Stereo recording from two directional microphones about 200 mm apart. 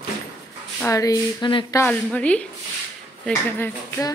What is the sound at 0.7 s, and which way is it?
A woman's voice, 15° left (ahead or behind).